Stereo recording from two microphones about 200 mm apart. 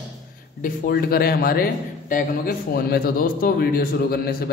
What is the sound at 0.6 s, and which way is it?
A man's voice, 50° left (ahead or behind).